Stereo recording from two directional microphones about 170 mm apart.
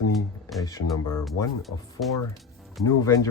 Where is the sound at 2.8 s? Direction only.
20° left (ahead or behind).